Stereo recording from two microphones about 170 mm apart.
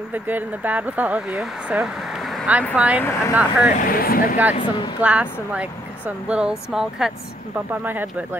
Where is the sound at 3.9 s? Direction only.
60° left (ahead or behind).